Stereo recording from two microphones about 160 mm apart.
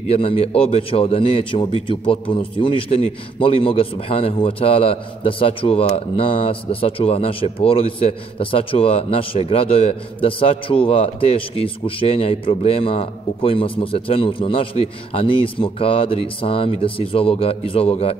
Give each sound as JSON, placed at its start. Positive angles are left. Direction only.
{"t": 0.1, "sound": "a man's voice", "side_deg": 35}